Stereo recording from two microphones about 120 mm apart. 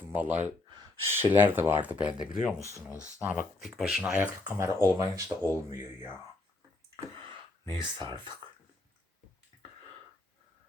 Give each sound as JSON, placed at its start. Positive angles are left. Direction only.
{"t": 0.1, "sound": "speech", "side_deg": -15}
{"t": 3.7, "sound": "speech", "side_deg": 0}
{"t": 7.2, "sound": "a sound", "side_deg": -45}